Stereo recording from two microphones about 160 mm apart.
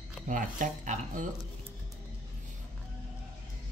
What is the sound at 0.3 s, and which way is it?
Speech, 55° right (ahead or behind).